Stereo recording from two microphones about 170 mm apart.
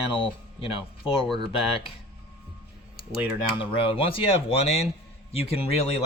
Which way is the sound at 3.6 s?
30° left (ahead or behind).